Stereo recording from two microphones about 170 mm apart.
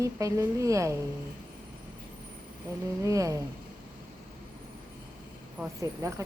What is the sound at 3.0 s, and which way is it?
Speech, 20° right (ahead or behind).